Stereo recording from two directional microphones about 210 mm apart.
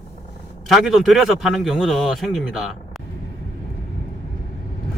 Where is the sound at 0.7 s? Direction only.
Centre (ahead or behind).